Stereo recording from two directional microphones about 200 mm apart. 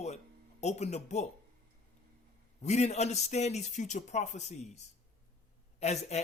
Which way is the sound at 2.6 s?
35° left (ahead or behind).